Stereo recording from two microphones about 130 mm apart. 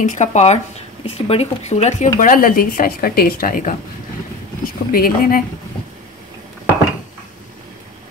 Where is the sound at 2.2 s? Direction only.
90° left.